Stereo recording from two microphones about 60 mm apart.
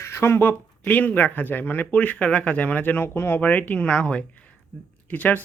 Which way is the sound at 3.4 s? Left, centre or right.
Left.